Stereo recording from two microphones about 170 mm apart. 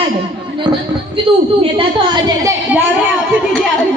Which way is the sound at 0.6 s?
30° right (ahead or behind).